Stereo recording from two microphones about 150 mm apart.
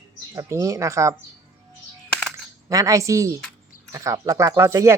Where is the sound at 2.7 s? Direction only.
20° right (ahead or behind).